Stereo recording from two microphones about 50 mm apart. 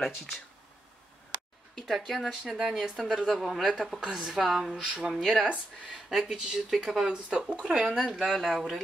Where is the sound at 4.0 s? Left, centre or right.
Centre.